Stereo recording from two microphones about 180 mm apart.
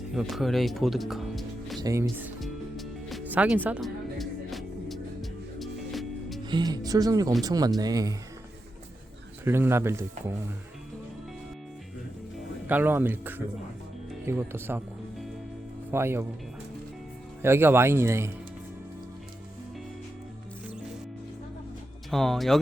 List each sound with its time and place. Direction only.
0.1 s speech: centre (ahead or behind)
1.8 s speech: 15° right (ahead or behind)
2.4 s music: centre (ahead or behind)
6.4 s speech: 25° right (ahead or behind)
9.4 s speech: 15° right (ahead or behind)
12.6 s speech: 10° right (ahead or behind)
15.9 s speech: 15° right (ahead or behind)
17.4 s speech: 10° right (ahead or behind)
22.1 s speech: centre (ahead or behind)